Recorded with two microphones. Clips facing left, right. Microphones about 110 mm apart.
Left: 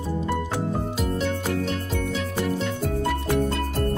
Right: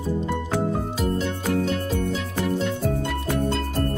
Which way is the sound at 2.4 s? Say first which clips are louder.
Right 4 dB; centre (ahead or behind).